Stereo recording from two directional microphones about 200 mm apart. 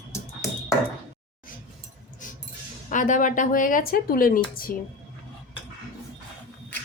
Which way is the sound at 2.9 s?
40° left (ahead or behind).